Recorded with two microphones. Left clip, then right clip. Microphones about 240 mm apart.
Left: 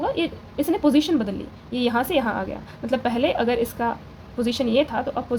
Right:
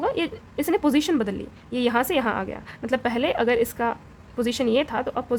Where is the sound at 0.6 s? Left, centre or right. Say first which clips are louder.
Left 2 dB; right.